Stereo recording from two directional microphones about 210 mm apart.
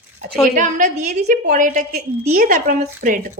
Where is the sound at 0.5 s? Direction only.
35° right (ahead or behind).